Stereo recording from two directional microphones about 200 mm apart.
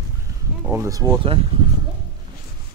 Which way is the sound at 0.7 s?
15° right (ahead or behind).